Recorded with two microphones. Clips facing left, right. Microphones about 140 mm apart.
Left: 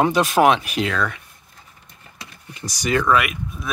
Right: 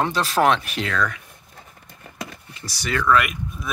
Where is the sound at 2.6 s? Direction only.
15° left (ahead or behind).